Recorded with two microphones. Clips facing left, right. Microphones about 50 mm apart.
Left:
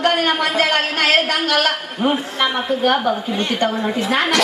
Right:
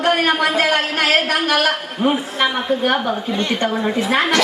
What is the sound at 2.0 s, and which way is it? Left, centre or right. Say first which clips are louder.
Speech: right 1 dB; centre.